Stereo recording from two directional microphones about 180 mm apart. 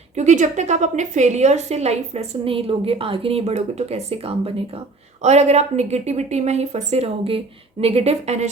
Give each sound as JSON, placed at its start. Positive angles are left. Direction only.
{"t": 0.2, "sound": "a woman's voice", "side_deg": -40}